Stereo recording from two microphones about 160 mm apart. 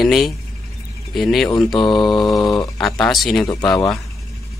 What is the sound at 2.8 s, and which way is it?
Speech, centre (ahead or behind).